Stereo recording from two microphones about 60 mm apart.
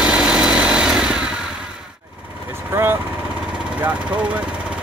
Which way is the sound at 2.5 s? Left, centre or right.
Right.